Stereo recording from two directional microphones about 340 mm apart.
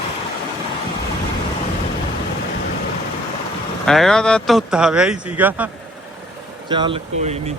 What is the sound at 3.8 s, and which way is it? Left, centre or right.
Speech, centre.